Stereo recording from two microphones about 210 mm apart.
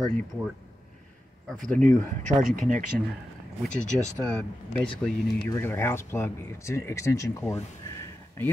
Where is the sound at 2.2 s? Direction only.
35° right (ahead or behind).